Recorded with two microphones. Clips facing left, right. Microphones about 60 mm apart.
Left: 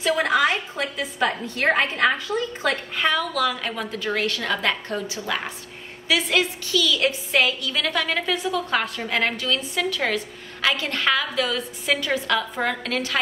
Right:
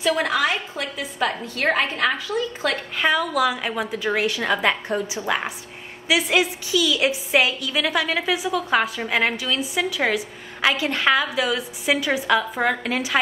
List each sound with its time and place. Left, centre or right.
0.0 s a sound: centre
1.2 s a woman's voice: centre
2.7 s a woman's voice: centre